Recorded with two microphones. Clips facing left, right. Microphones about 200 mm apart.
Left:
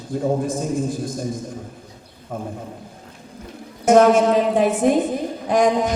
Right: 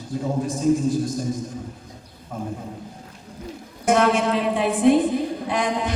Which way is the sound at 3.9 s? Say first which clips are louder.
Left 6 dB; 45° left (ahead or behind).